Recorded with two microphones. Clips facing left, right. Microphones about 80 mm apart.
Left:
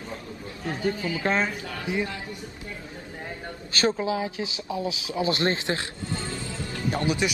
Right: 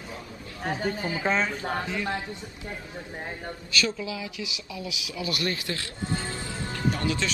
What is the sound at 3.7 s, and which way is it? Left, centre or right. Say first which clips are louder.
Speech: left 5 dB; left.